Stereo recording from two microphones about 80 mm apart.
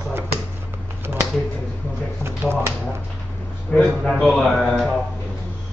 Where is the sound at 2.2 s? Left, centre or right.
Right.